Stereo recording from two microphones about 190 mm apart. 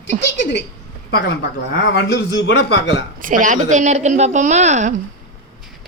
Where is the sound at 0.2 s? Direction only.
65° left (ahead or behind).